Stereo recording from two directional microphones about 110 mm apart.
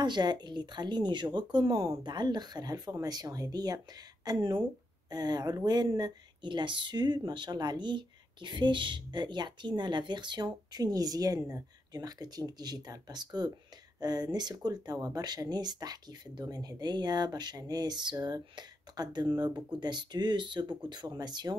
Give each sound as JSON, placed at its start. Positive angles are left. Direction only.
{"t": 0.0, "sound": "speech", "side_deg": -40}